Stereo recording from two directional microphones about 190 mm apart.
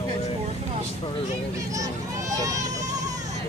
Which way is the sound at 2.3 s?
15° right (ahead or behind).